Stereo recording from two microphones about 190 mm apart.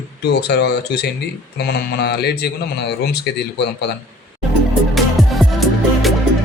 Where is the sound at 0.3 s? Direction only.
60° left (ahead or behind).